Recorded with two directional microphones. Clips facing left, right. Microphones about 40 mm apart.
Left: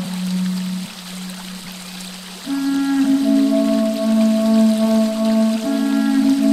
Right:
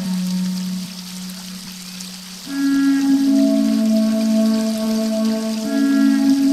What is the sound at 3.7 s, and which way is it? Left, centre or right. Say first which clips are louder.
Music: even; left.